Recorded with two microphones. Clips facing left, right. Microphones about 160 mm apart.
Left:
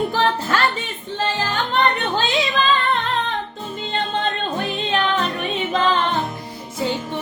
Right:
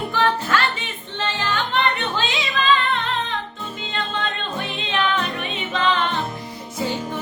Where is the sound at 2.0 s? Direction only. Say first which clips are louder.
Left 4 dB; 40° left (ahead or behind).